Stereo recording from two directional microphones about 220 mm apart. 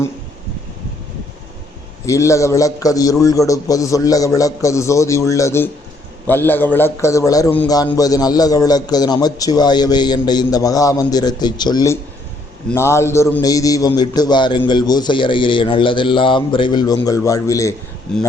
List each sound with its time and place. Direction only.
2.0 s a man's voice: 15° left (ahead or behind)
18.1 s speech: 5° left (ahead or behind)